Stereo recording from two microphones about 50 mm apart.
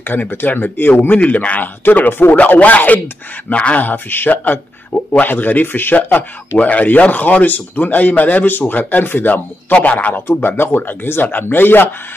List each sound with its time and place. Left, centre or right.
0.0 s speech: left
1.1 s a man's voice: left
3.9 s speech: left